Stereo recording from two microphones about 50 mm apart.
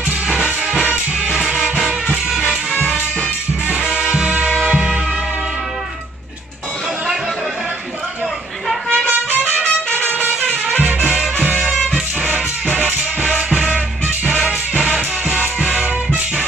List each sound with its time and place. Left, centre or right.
0.3 s music: centre
3.6 s music: centre
8.8 s music: centre
9.4 s trumpet: centre
10.8 s music: right
13.2 s music: right
15.8 s music: right